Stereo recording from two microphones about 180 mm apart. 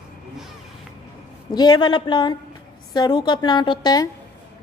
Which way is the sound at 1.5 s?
25° left (ahead or behind).